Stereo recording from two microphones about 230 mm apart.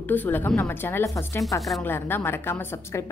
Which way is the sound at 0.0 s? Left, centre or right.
Centre.